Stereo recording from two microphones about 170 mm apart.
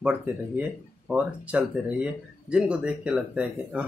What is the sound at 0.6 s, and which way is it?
Speech, 10° right (ahead or behind).